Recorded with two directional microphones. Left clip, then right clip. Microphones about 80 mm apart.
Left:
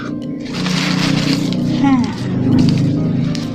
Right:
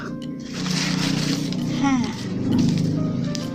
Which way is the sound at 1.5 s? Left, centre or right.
Right.